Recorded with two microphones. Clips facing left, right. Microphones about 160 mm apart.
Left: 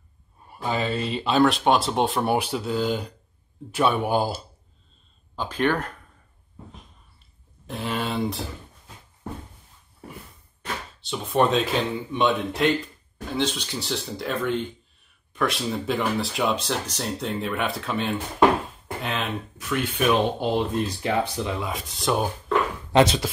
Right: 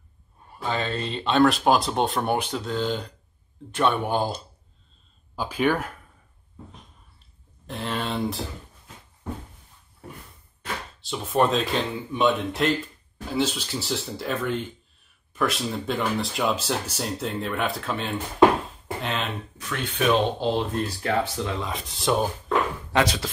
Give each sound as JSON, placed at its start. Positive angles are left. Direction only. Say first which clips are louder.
{"t": 0.5, "sound": "speech", "louder": "left 2 dB", "side_deg": 10}
{"t": 5.3, "sound": "speech", "louder": "even", "side_deg": -10}
{"t": 7.6, "sound": "speech", "louder": "left 1 dB", "side_deg": 5}
{"t": 10.6, "sound": "speech", "louder": "even", "side_deg": 0}
{"t": 22.9, "sound": "speech", "louder": "left 5 dB", "side_deg": 25}